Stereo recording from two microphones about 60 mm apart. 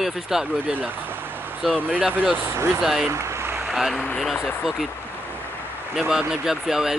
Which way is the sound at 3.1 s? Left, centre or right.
Right.